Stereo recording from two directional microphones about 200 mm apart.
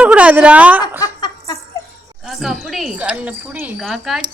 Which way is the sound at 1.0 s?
20° left (ahead or behind).